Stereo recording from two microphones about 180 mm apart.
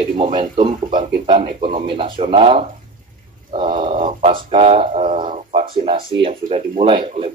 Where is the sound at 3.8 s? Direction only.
30° right (ahead or behind).